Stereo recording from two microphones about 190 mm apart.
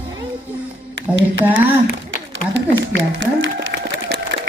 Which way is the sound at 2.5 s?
80° right.